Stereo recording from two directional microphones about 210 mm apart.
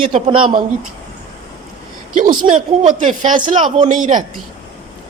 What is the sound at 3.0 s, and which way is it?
Speech, 35° right (ahead or behind).